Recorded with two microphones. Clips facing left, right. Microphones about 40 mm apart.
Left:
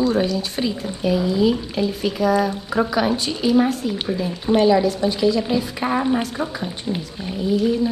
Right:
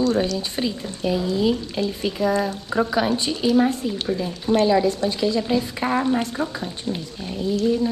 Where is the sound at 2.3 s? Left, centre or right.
Centre.